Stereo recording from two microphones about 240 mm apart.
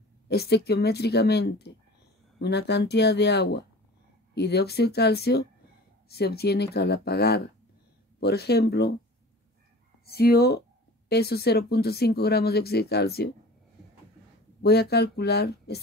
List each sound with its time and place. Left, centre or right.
0.3 s speech: left
10.0 s speech: left
14.6 s speech: left